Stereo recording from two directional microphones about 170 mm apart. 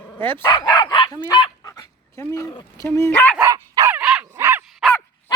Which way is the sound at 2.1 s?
20° left (ahead or behind).